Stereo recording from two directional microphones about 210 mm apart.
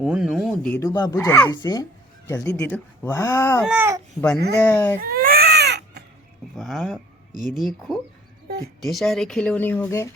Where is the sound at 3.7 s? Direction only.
10° right (ahead or behind).